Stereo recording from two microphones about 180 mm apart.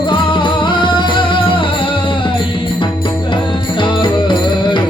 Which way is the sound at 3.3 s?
25° left (ahead or behind).